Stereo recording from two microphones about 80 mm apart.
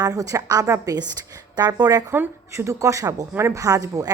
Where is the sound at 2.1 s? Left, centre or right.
Right.